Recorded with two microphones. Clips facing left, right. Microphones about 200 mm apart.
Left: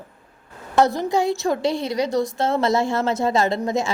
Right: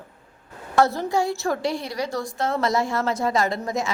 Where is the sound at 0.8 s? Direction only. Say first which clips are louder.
Left 2 dB; 15° left (ahead or behind).